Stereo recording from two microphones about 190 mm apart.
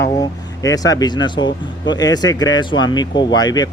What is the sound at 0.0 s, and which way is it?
Speech, 15° left (ahead or behind).